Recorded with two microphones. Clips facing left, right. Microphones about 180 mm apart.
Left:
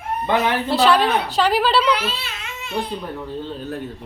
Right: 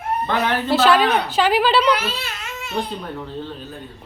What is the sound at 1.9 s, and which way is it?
Baby cry, 45° right (ahead or behind).